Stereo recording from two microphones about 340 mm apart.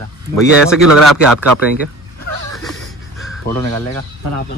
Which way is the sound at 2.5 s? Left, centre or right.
Centre.